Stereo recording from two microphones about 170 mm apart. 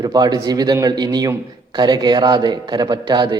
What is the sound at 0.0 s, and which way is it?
A man's voice, 25° right (ahead or behind).